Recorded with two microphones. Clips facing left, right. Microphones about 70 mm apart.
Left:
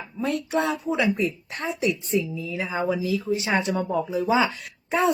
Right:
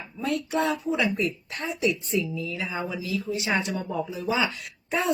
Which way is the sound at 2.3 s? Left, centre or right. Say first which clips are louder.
Left 2 dB; left.